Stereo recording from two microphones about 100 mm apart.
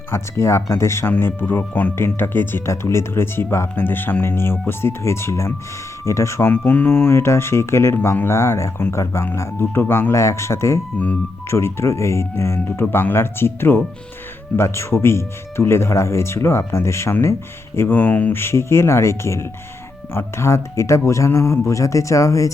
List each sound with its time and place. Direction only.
0.1 s speech: 30° left (ahead or behind)
10.9 s speech: 15° left (ahead or behind)
11.4 s speech: 25° left (ahead or behind)